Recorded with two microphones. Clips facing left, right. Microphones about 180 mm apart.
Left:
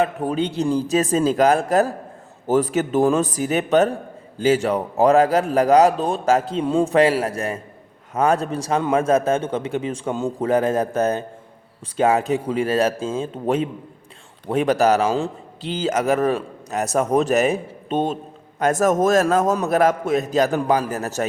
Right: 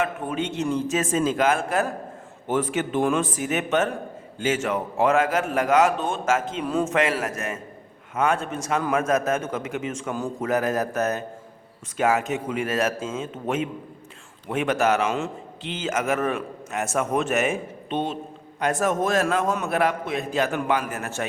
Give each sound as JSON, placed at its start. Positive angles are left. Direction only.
{"t": 0.0, "sound": "a man's voice", "side_deg": 35}